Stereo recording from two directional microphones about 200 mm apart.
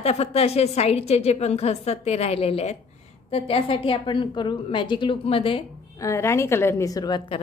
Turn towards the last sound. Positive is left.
turn(degrees=20)  # may be behind; listen again after turning